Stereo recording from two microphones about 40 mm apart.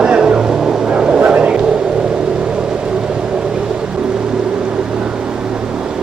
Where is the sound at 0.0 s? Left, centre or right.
Right.